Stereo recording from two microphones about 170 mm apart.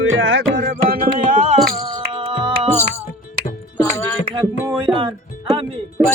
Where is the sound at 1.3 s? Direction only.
45° right (ahead or behind).